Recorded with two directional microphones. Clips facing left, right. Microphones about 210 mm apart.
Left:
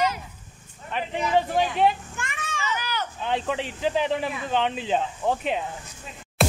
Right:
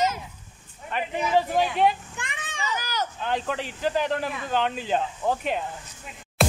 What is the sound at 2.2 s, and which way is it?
Children playing, 15° right (ahead or behind).